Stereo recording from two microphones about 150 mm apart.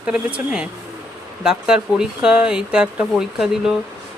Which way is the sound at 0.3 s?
5° right (ahead or behind).